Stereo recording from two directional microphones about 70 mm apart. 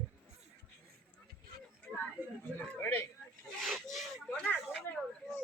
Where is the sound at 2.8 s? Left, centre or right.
Left.